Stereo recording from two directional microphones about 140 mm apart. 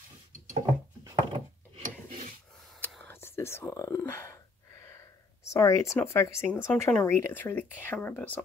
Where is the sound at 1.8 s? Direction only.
70° right (ahead or behind).